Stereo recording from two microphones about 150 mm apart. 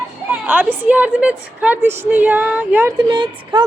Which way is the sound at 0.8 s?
10° right (ahead or behind).